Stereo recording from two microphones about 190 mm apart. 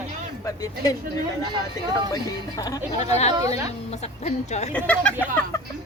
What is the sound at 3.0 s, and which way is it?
Speech, 35° left (ahead or behind).